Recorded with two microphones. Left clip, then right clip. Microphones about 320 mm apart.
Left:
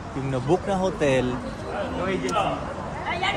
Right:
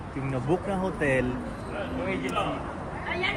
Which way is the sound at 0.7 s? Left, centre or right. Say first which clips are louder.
Left 4 dB; centre.